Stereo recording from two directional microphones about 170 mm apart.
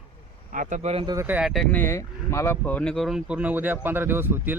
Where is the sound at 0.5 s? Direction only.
50° right (ahead or behind).